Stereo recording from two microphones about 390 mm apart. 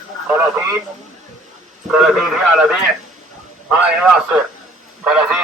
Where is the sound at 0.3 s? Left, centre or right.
Centre.